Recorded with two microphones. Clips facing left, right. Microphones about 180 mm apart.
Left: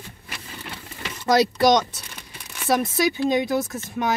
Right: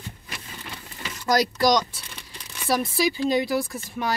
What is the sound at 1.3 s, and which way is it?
Speech, 25° left (ahead or behind).